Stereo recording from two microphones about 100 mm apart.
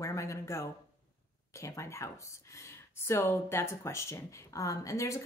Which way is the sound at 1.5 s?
30° left (ahead or behind).